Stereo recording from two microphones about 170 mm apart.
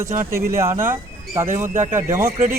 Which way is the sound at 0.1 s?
50° right (ahead or behind).